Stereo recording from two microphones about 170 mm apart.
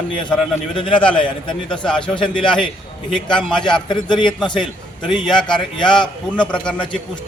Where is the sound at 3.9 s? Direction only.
25° left (ahead or behind).